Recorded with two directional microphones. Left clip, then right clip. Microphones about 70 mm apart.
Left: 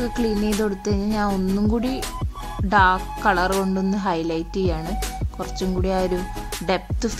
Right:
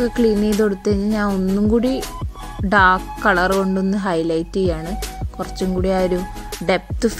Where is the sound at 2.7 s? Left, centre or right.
Right.